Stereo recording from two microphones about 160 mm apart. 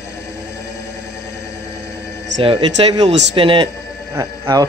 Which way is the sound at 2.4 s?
30° right (ahead or behind).